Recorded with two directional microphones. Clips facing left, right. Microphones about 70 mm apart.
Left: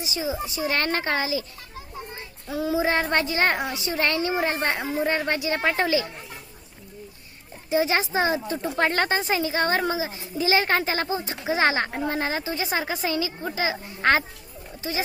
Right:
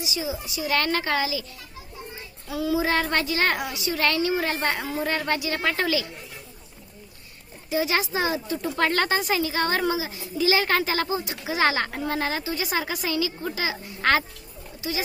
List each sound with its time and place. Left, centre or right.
0.0 s speech: left
2.5 s speech: left
7.7 s speech: left